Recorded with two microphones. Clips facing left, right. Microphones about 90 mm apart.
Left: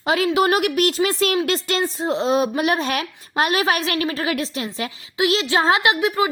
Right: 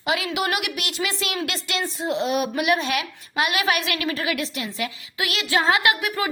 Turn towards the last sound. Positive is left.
turn(degrees=25)  # may be behind; listen again after turning